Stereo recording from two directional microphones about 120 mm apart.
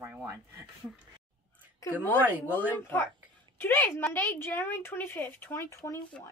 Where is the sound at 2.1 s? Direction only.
15° right (ahead or behind).